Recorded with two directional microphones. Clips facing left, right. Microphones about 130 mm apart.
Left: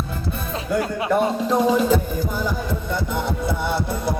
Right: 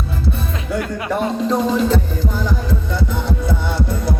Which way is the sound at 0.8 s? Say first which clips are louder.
Even; 25° left (ahead or behind).